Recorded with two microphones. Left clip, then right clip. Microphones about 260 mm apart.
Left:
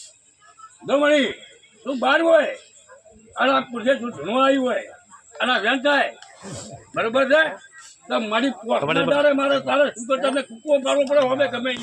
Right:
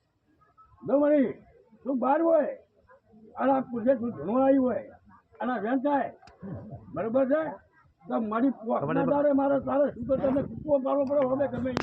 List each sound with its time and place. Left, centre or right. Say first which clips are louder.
0.9 s a man's voice: left 6 dB; left